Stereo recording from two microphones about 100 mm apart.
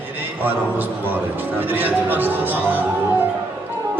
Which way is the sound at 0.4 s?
20° right (ahead or behind).